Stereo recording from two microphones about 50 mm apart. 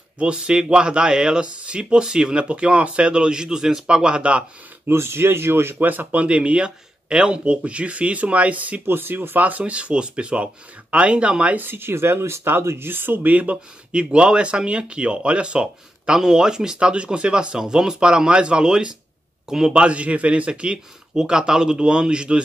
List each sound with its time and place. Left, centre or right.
0.2 s speech: centre
4.8 s speech: right
5.9 s speech: right
6.2 s speech: right
8.8 s speech: right
11.5 s speech: right; by 22.4 s centre